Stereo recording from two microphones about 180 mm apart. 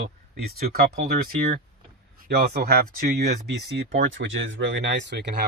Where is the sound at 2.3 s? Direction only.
60° right (ahead or behind).